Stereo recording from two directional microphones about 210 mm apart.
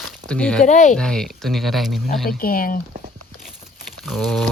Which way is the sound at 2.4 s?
45° left (ahead or behind).